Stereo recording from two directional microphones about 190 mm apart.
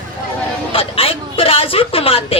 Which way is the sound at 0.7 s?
30° left (ahead or behind).